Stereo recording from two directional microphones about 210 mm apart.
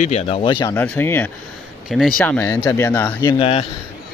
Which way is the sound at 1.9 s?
Centre (ahead or behind).